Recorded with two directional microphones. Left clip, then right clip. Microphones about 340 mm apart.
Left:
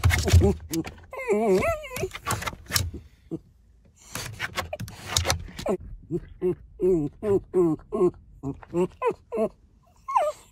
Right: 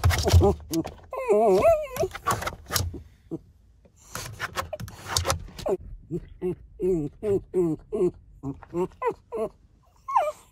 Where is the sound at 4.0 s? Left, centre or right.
Centre.